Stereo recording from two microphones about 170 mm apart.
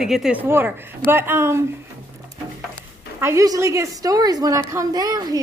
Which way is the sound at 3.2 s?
15° right (ahead or behind).